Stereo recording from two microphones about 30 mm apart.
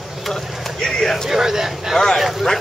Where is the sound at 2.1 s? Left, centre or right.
Centre.